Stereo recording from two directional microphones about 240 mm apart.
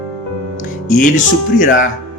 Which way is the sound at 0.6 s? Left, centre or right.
Left.